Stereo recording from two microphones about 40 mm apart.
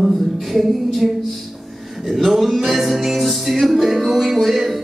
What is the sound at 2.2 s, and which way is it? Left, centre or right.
Music, centre.